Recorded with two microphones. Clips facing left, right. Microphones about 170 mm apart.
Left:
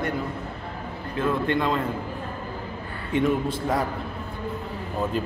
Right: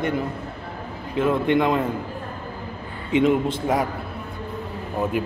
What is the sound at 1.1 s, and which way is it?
Speech, 20° right (ahead or behind).